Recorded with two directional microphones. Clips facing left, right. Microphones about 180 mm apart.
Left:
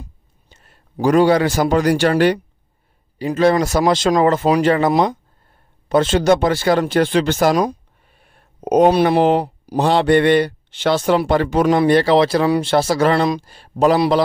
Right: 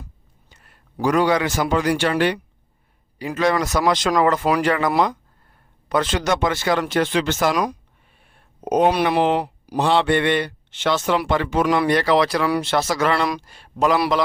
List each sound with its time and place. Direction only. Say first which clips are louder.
0.0 s a man's voice: left 4 dB; 25° left (ahead or behind)
8.2 s a sound: left 6 dB; 40° left (ahead or behind)
8.9 s speech: left 5 dB; 35° left (ahead or behind)